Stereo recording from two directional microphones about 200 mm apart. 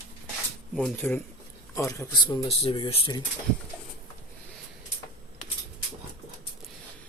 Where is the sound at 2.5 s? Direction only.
25° left (ahead or behind).